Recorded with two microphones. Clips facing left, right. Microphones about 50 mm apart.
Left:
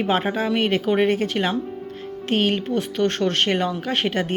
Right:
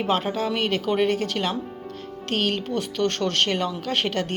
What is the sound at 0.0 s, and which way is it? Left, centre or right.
Speech, centre.